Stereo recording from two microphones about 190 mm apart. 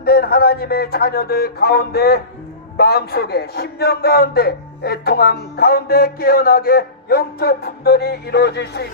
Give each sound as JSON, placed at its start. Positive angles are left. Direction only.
{"t": 0.0, "sound": "a man's voice", "side_deg": 55}